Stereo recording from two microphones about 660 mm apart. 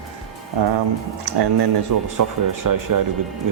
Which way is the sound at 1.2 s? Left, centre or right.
Right.